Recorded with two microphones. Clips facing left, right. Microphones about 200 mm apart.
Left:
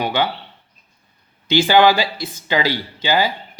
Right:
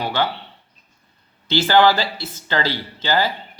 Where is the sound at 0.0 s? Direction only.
15° left (ahead or behind).